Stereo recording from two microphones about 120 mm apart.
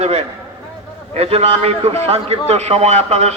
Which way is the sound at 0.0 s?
60° right (ahead or behind).